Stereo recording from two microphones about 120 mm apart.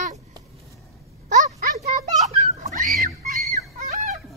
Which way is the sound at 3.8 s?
75° right (ahead or behind).